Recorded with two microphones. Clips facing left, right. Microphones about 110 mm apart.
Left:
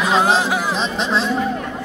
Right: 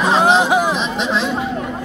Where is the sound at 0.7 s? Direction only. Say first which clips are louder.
Right 1 dB; 35° left (ahead or behind).